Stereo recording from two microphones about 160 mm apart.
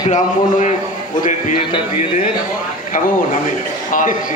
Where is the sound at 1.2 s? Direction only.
50° left (ahead or behind).